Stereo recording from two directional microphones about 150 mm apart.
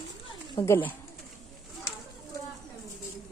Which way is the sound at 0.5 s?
20° left (ahead or behind).